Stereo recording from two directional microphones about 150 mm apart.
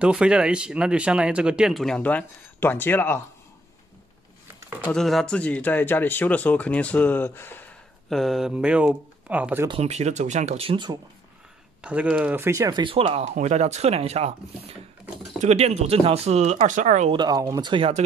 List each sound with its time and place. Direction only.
0.0 s speech: 5° right (ahead or behind); by 3.2 s 15° left (ahead or behind)
4.8 s speech: centre (ahead or behind)
8.1 s speech: centre (ahead or behind)
9.7 s speech: 45° right (ahead or behind)
11.8 s speech: 10° right (ahead or behind); by 17.1 s 55° right (ahead or behind)
17.1 s speech: 25° right (ahead or behind)